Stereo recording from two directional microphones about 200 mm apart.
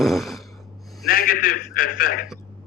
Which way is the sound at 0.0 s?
Centre (ahead or behind).